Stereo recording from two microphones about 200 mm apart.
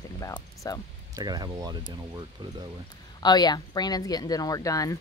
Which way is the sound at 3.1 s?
20° left (ahead or behind).